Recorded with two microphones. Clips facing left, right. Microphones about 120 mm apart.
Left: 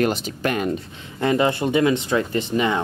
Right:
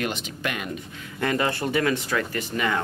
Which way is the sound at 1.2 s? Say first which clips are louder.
Left 5 dB; 20° left (ahead or behind).